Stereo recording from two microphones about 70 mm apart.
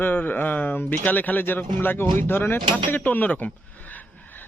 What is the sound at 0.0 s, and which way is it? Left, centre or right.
Speech, left.